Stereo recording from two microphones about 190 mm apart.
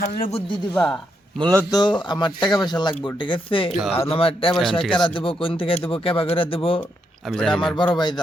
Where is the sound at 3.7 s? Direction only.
Centre (ahead or behind).